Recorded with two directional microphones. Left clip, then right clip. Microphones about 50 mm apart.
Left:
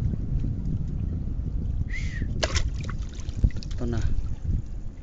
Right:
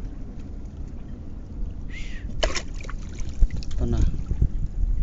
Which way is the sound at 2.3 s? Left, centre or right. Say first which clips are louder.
Right 2 dB; centre.